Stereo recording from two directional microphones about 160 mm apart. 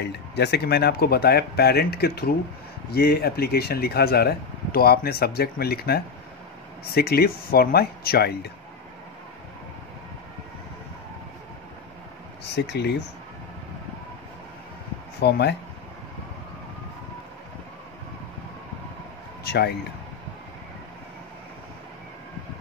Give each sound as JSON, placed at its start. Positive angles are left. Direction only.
{"t": 0.0, "sound": "speech", "side_deg": 90}
{"t": 12.5, "sound": "speech", "side_deg": 90}
{"t": 15.2, "sound": "speech", "side_deg": 90}
{"t": 19.4, "sound": "a sound", "side_deg": 90}